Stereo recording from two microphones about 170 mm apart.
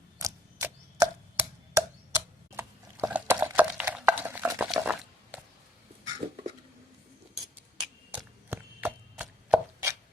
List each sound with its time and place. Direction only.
0.2 s tick-tock: 20° right (ahead or behind)
6.1 s a sound: 25° right (ahead or behind)
8.1 s chopping: 10° right (ahead or behind)